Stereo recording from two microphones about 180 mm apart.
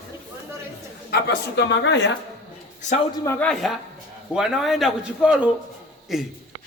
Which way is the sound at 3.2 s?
15° left (ahead or behind).